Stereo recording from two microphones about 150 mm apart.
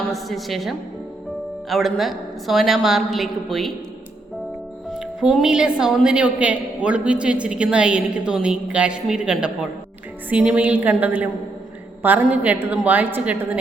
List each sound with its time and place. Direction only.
0.1 s a woman's voice: centre (ahead or behind)
4.9 s a woman's voice: 5° right (ahead or behind)